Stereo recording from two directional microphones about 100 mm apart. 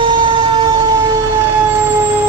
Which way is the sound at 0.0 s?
55° right (ahead or behind).